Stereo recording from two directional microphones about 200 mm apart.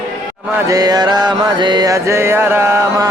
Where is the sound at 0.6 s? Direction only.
20° right (ahead or behind).